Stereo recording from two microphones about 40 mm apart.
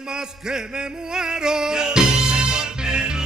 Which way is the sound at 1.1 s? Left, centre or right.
Centre.